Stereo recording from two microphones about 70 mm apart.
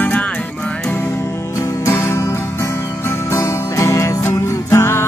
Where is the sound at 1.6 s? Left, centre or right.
Left.